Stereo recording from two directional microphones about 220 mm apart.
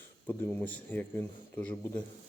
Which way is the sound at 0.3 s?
10° left (ahead or behind).